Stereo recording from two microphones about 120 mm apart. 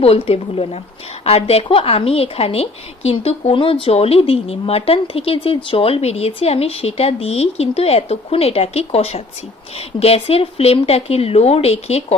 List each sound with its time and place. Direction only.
0.0 s a woman's voice: 55° left (ahead or behind)